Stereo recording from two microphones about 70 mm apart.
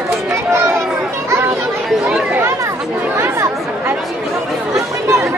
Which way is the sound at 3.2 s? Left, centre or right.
Right.